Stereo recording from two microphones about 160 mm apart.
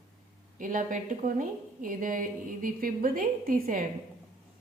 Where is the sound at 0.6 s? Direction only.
55° right (ahead or behind).